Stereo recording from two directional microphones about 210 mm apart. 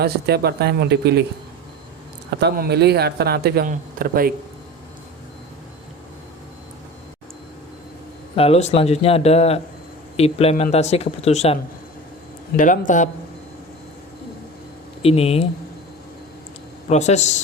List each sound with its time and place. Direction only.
0.0 s speech: 50° right (ahead or behind)
2.4 s speech: 50° right (ahead or behind)
8.4 s speech: 30° left (ahead or behind)
12.5 s a man's voice: 40° left (ahead or behind)
15.0 s speech: 30° left (ahead or behind)
16.9 s a man's voice: 35° left (ahead or behind)